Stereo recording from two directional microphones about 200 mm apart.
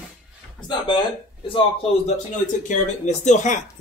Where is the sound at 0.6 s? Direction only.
25° left (ahead or behind).